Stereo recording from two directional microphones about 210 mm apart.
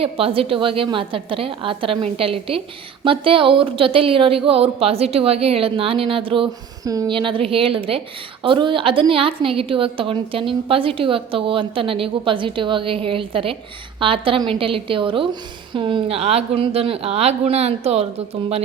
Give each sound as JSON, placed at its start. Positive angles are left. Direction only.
{"t": 0.0, "sound": "a woman's voice", "side_deg": -25}